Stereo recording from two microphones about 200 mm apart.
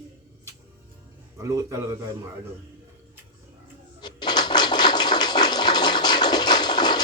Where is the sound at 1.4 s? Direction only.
15° right (ahead or behind).